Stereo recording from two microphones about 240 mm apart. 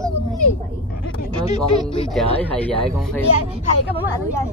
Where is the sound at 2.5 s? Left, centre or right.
Centre.